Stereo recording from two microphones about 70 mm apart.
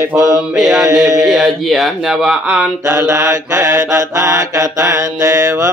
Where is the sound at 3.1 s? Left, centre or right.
Right.